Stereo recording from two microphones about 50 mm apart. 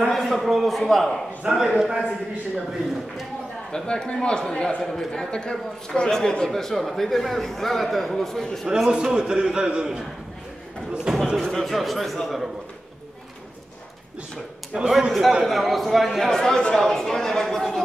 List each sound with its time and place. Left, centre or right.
0.1 s speech: centre
1.4 s a man's voice: centre
3.7 s a man's voice: centre
8.6 s a man's voice: centre
11.3 s speech: centre
14.7 s a man's voice: centre
15.4 s a man's voice: centre